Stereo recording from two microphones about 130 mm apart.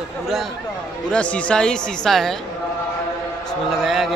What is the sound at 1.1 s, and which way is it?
Speech, 10° left (ahead or behind).